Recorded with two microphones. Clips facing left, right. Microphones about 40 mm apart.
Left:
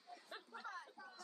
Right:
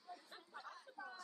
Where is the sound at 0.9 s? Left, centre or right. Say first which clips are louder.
Right 5 dB; right.